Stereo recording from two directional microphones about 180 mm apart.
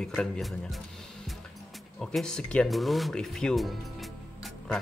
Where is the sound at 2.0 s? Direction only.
5° left (ahead or behind).